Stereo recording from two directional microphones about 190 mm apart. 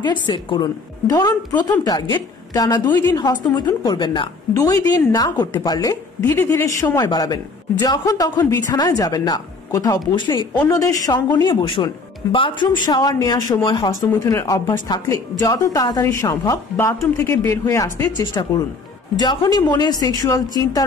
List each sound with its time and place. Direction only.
0.3 s a woman's voice: 25° left (ahead or behind)
18.2 s a woman's voice: 25° left (ahead or behind)